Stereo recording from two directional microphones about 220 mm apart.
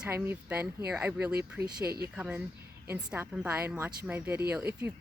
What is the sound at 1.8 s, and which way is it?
Speech, 45° right (ahead or behind).